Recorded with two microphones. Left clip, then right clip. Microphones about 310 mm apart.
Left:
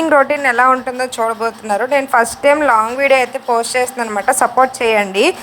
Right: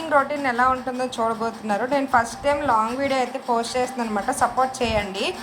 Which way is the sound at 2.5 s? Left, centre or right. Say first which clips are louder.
Left 8 dB; left.